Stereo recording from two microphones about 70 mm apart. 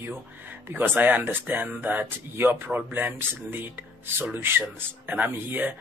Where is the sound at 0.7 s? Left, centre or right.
Right.